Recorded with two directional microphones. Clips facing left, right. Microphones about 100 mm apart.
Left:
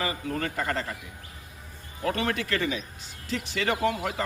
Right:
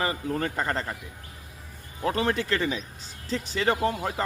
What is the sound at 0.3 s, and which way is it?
Speech, 30° right (ahead or behind).